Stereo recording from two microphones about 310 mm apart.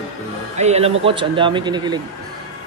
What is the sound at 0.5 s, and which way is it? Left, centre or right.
A man's voice, right.